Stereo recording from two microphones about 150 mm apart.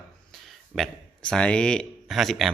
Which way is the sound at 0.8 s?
5° left (ahead or behind).